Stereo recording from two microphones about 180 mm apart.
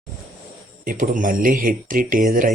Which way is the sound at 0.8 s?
50° right (ahead or behind).